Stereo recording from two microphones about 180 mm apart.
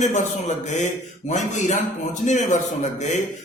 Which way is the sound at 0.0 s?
40° left (ahead or behind).